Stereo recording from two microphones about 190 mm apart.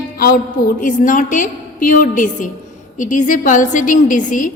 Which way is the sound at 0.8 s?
45° left (ahead or behind).